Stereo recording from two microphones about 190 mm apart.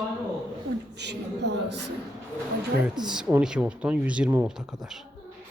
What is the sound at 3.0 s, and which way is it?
Speech, 5° right (ahead or behind).